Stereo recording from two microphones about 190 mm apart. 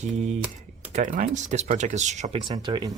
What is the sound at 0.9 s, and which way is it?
Speech, 40° right (ahead or behind).